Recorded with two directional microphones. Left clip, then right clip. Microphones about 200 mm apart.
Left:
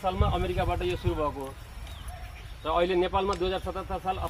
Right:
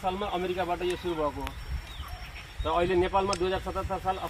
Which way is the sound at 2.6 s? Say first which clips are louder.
Left 1 dB; 35° right (ahead or behind).